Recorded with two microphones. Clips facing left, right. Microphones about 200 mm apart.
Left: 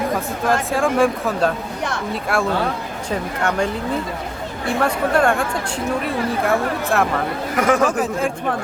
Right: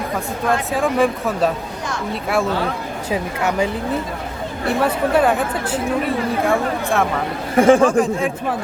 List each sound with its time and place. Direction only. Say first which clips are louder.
0.7 s a woman's voice: even; centre (ahead or behind)
4.8 s a woman's voice: right 1 dB; 5° right (ahead or behind)
7.5 s speech: right 6 dB; 30° right (ahead or behind)
7.9 s a woman's voice: right 3 dB; 5° left (ahead or behind)